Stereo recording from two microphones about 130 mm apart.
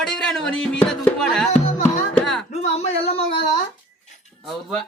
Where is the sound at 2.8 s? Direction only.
50° left (ahead or behind).